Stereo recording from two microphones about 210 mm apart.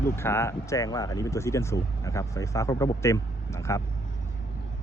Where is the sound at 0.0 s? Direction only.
10° left (ahead or behind).